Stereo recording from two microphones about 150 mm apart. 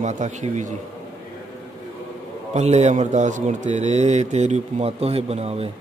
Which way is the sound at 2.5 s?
50° right (ahead or behind).